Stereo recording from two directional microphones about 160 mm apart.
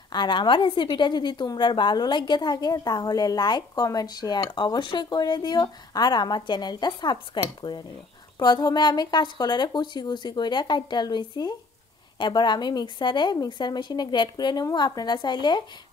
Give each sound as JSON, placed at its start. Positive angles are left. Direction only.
{"t": 0.1, "sound": "a woman's voice", "side_deg": 30}